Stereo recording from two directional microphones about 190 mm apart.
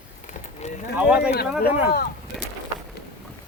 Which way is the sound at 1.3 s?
55° left (ahead or behind).